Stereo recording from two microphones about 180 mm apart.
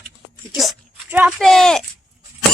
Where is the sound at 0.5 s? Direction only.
5° right (ahead or behind).